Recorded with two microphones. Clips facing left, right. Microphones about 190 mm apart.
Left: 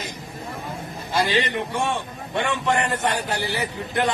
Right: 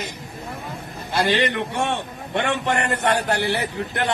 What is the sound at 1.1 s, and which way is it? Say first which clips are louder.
A man's voice: right 2 dB; 65° right (ahead or behind).